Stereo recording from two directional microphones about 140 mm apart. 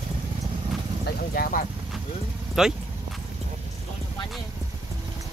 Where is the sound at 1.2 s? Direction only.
90° left.